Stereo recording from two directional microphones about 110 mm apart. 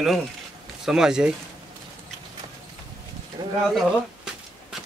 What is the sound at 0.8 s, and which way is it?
Speech, 5° right (ahead or behind).